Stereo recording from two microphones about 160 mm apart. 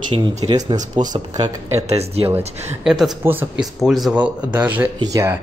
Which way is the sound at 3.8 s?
Centre (ahead or behind).